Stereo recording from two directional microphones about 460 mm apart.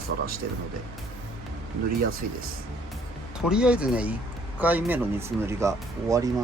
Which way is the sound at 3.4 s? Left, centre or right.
Centre.